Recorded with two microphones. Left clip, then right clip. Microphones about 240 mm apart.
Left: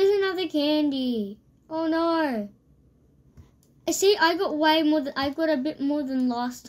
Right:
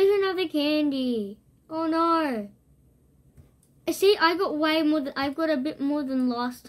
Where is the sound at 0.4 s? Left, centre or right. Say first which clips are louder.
Even; left.